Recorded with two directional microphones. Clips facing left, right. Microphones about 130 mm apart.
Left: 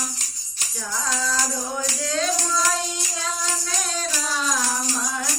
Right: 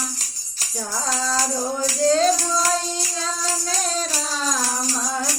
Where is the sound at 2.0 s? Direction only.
35° right (ahead or behind).